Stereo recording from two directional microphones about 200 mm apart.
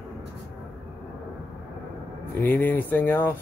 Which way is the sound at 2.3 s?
10° left (ahead or behind).